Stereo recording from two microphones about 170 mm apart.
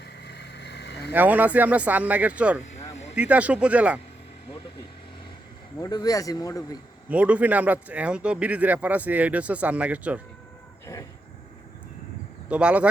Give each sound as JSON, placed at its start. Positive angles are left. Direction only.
{"t": 0.0, "sound": "vehicle", "side_deg": 75}
{"t": 1.1, "sound": "speech", "side_deg": -10}
{"t": 5.7, "sound": "speech", "side_deg": 20}
{"t": 7.1, "sound": "speech", "side_deg": -10}
{"t": 12.5, "sound": "speech", "side_deg": -5}